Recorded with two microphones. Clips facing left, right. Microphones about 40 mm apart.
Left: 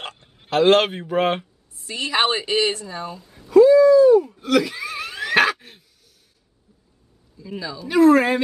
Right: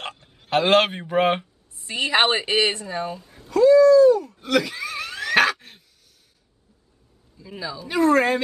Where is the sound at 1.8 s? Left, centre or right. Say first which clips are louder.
Right 1 dB; right.